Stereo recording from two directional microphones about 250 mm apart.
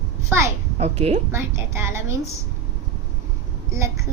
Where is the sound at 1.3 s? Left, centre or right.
Centre.